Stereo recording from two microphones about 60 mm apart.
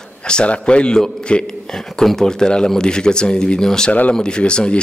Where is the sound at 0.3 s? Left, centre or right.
Centre.